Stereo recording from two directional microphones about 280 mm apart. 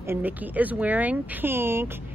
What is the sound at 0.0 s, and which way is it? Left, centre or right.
A woman's voice, centre.